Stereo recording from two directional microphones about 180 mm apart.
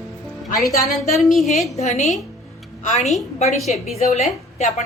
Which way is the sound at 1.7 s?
40° left (ahead or behind).